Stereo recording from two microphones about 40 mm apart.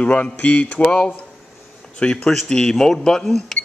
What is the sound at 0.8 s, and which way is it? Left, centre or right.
Speech, left.